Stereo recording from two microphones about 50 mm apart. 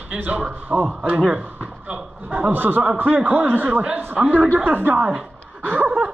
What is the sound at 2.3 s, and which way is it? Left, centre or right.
A man's voice, right.